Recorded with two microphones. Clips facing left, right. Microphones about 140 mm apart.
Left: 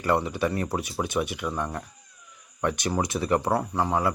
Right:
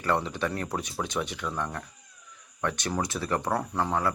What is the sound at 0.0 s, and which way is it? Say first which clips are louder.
Speech: left 3 dB; 10° left (ahead or behind).